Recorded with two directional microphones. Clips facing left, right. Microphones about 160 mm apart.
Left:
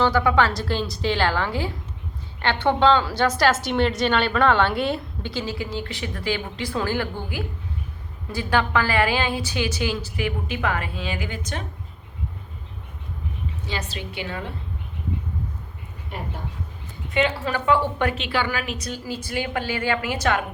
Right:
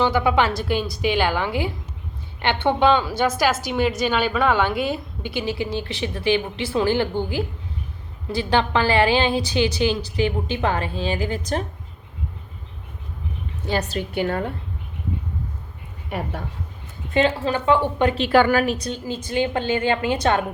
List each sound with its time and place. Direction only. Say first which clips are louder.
0.0 s a woman's voice: even; 20° right (ahead or behind); by 11.6 s 35° right (ahead or behind)
13.7 s a woman's voice: right 9 dB; 45° right (ahead or behind)
16.0 s speech: right 5 dB; 70° right (ahead or behind)
17.2 s a woman's voice: right 3 dB; 30° right (ahead or behind)
18.1 s a woman's voice: right 9 dB; 45° right (ahead or behind); by 20.4 s 30° right (ahead or behind)